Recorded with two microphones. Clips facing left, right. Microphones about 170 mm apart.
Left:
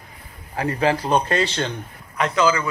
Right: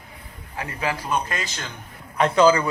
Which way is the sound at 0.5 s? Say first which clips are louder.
Left 7 dB; 35° left (ahead or behind).